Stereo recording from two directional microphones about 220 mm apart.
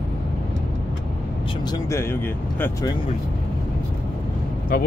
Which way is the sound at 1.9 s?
10° left (ahead or behind).